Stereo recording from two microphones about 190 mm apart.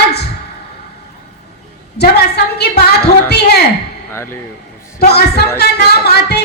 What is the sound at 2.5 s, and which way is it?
A woman's voice, 60° left (ahead or behind).